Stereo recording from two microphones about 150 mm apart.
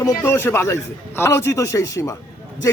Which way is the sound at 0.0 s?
20° left (ahead or behind).